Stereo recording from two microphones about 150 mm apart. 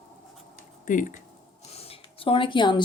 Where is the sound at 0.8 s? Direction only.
60° left (ahead or behind).